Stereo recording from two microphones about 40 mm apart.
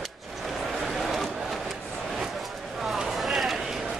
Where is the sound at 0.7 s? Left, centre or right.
Centre.